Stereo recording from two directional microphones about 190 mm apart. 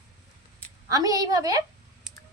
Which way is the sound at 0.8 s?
20° right (ahead or behind).